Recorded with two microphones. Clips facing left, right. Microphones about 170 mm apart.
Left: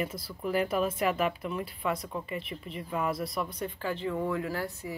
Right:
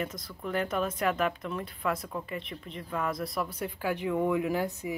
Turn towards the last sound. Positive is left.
turn(degrees=-15)  # may be behind; listen again after turning